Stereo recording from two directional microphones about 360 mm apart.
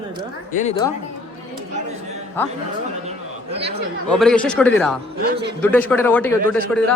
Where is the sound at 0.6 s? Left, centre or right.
Centre.